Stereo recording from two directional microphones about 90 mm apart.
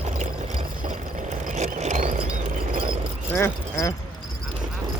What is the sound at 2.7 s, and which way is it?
Clip-clop, 75° right (ahead or behind).